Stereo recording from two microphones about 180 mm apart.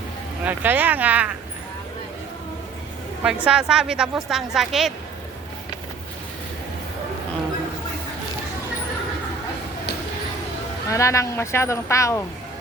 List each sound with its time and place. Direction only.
0.4 s speech: 10° right (ahead or behind)
3.4 s a woman's voice: 5° right (ahead or behind)
10.8 s speech: 15° left (ahead or behind)